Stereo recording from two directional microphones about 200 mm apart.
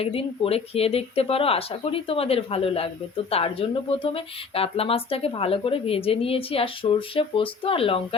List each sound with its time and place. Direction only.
0.0 s speech: 30° left (ahead or behind)